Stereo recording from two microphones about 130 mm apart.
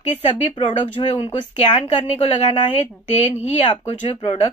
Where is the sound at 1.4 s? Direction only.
40° left (ahead or behind).